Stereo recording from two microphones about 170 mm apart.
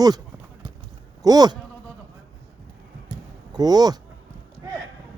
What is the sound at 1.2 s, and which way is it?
Speech, 20° right (ahead or behind).